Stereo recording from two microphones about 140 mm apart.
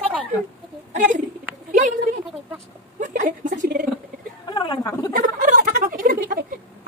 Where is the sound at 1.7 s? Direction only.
65° right (ahead or behind).